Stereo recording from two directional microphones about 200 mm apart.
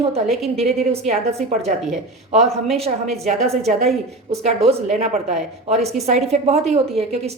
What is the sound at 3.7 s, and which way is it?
Speech, 35° right (ahead or behind).